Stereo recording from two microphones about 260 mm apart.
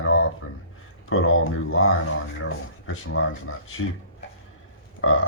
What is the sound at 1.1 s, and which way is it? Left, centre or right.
Speech, left.